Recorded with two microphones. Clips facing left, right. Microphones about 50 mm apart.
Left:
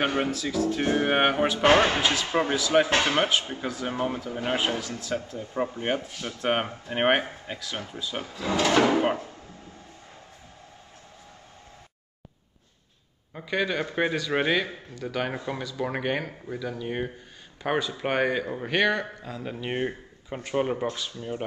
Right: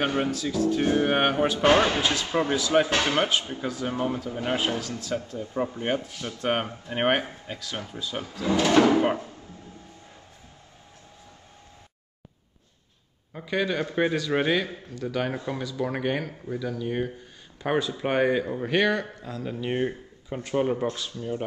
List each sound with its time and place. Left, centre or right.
0.0 s speech: centre
0.4 s speech: left
0.7 s speech: centre
4.7 s speech: left
5.5 s speech: centre
13.3 s speech: centre
15.2 s speech: centre
17.6 s speech: centre
19.2 s speech: centre
21.2 s speech: centre